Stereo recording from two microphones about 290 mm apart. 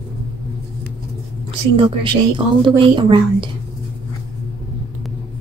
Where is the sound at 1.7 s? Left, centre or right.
Centre.